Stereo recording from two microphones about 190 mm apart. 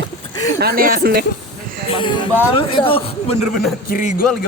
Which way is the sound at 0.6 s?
50° right (ahead or behind).